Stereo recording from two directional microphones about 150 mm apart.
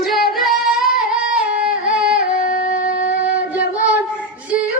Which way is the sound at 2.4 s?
60° left (ahead or behind).